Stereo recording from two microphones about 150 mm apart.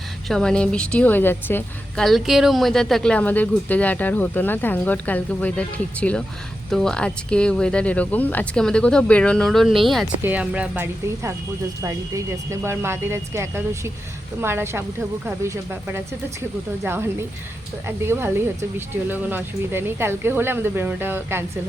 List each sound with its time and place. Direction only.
0.3 s speech: 5° left (ahead or behind)
2.0 s speech: centre (ahead or behind)
11.8 s speech: 20° right (ahead or behind)
16.8 s speech: 15° right (ahead or behind)